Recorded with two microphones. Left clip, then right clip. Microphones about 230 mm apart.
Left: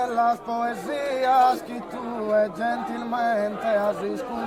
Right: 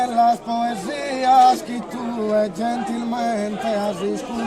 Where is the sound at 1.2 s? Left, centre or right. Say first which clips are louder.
Right 6 dB; right.